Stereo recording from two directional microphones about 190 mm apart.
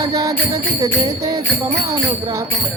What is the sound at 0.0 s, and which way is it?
Music, 20° right (ahead or behind).